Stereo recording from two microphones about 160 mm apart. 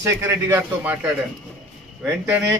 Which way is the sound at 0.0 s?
15° right (ahead or behind).